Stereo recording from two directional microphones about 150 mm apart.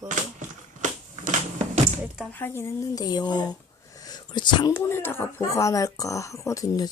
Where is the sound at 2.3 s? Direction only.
15° left (ahead or behind).